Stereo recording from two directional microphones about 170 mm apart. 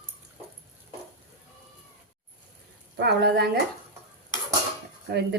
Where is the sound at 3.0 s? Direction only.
75° right (ahead or behind).